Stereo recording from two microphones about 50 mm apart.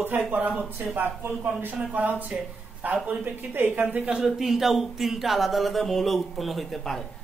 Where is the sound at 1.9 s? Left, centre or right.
Right.